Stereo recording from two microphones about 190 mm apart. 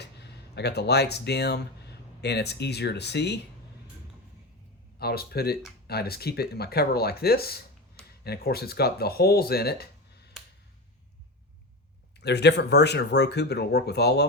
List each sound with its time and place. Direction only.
0.0 s speech: 60° left (ahead or behind)
4.9 s speech: 55° left (ahead or behind)
12.2 s speech: 60° left (ahead or behind)